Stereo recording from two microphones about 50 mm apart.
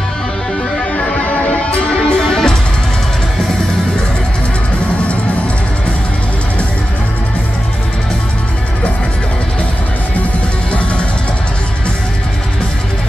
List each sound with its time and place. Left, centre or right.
0.7 s music: left
2.0 s music: centre
10.7 s music: left